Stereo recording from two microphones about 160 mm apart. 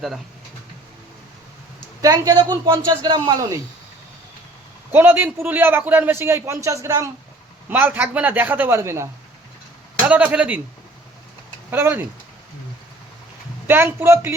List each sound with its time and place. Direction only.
2.0 s a man's voice: 20° right (ahead or behind)
4.9 s a man's voice: 15° right (ahead or behind)
10.1 s a man's voice: 10° right (ahead or behind)
11.7 s a man's voice: 15° right (ahead or behind)
13.7 s a man's voice: 15° right (ahead or behind)